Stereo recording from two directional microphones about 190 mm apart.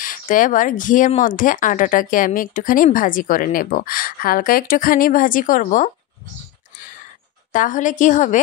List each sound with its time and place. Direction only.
0.0 s speech: 45° left (ahead or behind)
7.5 s speech: 45° left (ahead or behind)